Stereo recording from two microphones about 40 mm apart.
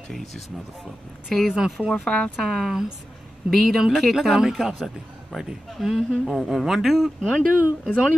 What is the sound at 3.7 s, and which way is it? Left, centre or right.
Speech, centre.